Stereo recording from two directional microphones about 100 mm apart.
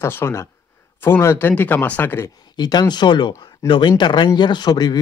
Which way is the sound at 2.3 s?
45° left (ahead or behind).